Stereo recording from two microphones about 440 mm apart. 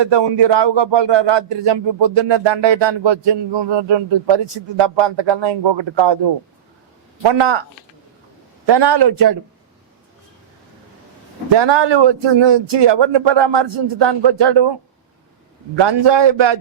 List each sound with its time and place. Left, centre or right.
0.0 s speech: right
7.2 s speech: right
8.6 s a man's voice: right
11.4 s speech: right
15.7 s speech: right